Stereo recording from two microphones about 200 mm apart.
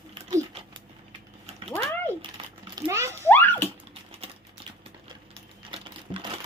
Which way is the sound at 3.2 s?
10° left (ahead or behind).